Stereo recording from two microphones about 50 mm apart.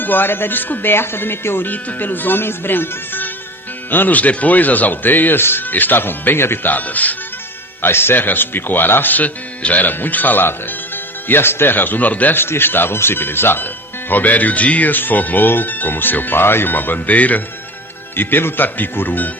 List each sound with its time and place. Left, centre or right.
0.0 s speech: left
6.7 s speech: left
7.8 s speech: left
12.4 s speech: left
14.1 s speech: left
18.2 s speech: left